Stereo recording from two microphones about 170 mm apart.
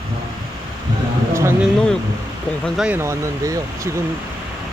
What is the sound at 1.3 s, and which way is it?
Speech, 15° right (ahead or behind).